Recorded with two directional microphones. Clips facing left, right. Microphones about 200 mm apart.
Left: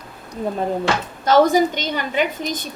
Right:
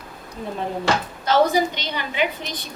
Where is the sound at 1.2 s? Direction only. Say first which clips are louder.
Left 4 dB; 45° left (ahead or behind).